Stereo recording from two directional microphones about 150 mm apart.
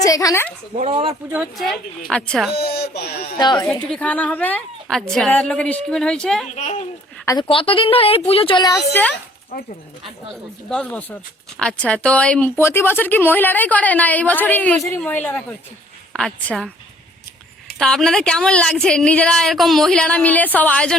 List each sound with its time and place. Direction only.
0.0 s a woman's voice: 25° left (ahead or behind)
0.9 s speech: 35° right (ahead or behind)
1.3 s a woman's voice: 5° right (ahead or behind)
2.6 s speech: 90° left
3.3 s speech: 30° left (ahead or behind)
3.7 s a woman's voice: 5° left (ahead or behind)
6.6 s a child's voice: 50° left (ahead or behind)
7.4 s a woman's voice: 40° left (ahead or behind)
8.9 s a woman's voice: 10° left (ahead or behind)
10.7 s a woman's voice: 10° left (ahead or behind)
17.7 s a woman's voice: 5° left (ahead or behind)